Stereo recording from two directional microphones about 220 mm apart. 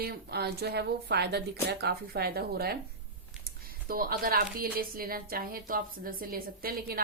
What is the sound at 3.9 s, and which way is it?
A woman's voice, 40° right (ahead or behind).